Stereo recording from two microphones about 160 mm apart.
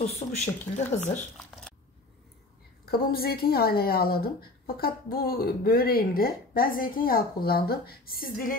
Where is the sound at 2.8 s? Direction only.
70° left (ahead or behind).